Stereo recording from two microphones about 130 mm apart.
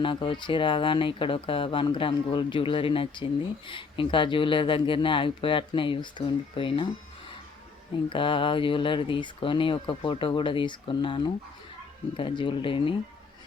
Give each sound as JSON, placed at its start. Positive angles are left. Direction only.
{"t": 0.0, "sound": "speech", "side_deg": 40}
{"t": 8.1, "sound": "speech", "side_deg": 40}